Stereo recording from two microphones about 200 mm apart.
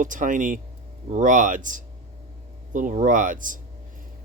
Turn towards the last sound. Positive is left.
turn(degrees=-40)  # may be behind; listen again after turning